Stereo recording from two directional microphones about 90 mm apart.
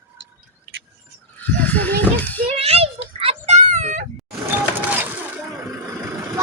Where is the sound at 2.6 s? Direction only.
90° right.